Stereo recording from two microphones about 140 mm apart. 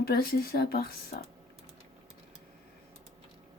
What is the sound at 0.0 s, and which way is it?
Speech, 90° left.